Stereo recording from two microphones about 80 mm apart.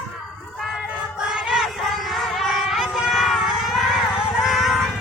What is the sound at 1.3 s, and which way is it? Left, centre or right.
Music, centre.